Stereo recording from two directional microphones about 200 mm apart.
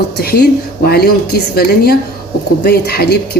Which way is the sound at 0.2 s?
50° left (ahead or behind).